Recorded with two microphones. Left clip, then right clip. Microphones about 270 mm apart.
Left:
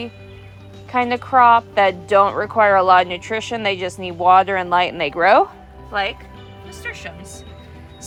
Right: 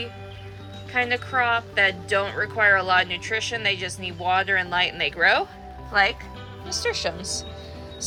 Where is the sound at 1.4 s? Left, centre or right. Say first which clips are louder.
Left 9 dB; centre.